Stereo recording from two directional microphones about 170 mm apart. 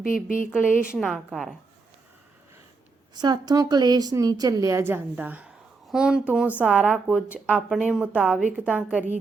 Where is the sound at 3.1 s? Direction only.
25° right (ahead or behind).